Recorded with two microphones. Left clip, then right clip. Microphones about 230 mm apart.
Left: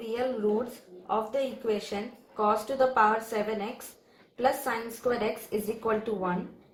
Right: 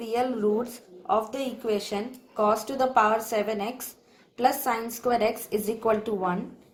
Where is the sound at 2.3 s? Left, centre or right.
Right.